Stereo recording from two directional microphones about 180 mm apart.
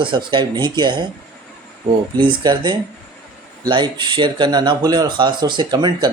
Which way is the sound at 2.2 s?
25° right (ahead or behind).